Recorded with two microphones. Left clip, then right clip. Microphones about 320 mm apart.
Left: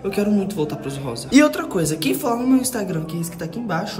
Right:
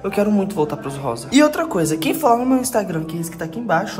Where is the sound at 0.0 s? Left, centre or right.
Centre.